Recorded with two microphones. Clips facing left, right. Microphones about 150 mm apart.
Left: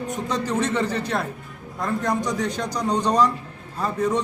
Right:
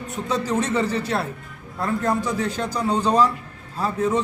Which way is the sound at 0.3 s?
10° right (ahead or behind).